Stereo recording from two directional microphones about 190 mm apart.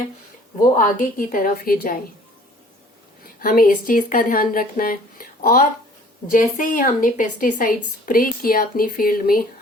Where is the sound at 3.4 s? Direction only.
50° left (ahead or behind).